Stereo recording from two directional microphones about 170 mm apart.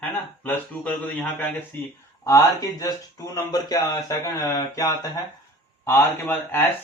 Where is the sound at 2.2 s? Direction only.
20° left (ahead or behind).